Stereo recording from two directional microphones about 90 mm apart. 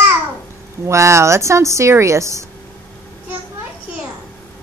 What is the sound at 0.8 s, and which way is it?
Speech, 30° right (ahead or behind).